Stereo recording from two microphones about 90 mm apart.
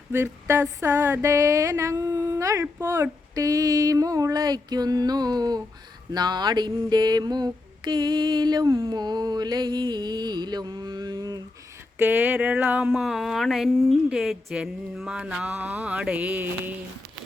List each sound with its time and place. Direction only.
0.1 s a sound: 30° right (ahead or behind)
2.8 s speech: 30° right (ahead or behind); by 8.6 s 55° right (ahead or behind)
8.6 s a sound: 35° right (ahead or behind)
9.0 s speech: 50° right (ahead or behind)
11.9 s mantra: 20° right (ahead or behind)
12.9 s speech: 5° right (ahead or behind)
14.1 s mantra: 5° right (ahead or behind)